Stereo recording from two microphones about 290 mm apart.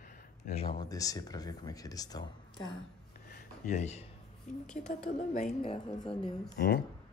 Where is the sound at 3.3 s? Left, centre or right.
Left.